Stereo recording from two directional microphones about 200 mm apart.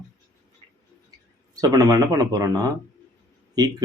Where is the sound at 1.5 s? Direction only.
20° right (ahead or behind).